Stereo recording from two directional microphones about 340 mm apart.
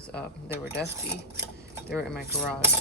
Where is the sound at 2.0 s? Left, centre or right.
Centre.